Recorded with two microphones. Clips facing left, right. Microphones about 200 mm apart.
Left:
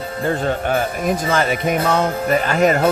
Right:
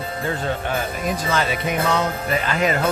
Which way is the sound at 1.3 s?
50° left (ahead or behind).